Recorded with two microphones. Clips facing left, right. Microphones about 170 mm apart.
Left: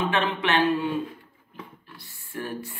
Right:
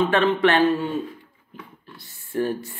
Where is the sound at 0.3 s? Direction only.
45° right (ahead or behind).